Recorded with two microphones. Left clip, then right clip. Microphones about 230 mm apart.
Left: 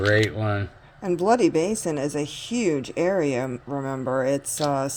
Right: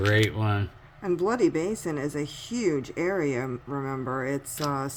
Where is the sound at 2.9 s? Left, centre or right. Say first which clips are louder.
Left 5 dB; centre.